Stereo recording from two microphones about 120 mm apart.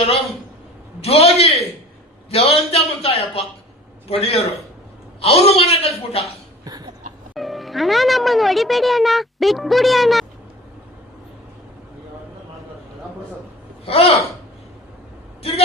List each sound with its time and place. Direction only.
1.0 s a man's voice: 55° left (ahead or behind)
6.7 s a sound: 30° right (ahead or behind)
7.3 s speech: centre (ahead or behind)
13.8 s a man's voice: 55° left (ahead or behind)